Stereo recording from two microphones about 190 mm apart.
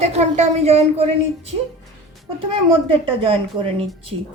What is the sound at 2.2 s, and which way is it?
A woman's voice, 30° right (ahead or behind).